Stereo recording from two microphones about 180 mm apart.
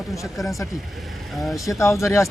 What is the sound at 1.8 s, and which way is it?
Speech, 15° left (ahead or behind).